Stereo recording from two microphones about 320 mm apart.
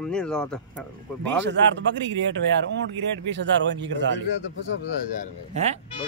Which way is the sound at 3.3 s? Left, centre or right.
Right.